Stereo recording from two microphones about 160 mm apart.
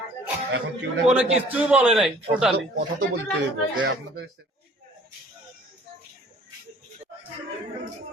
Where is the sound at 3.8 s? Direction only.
90° right.